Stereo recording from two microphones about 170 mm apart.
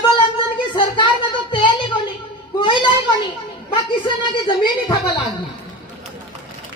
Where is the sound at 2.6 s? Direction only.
30° left (ahead or behind).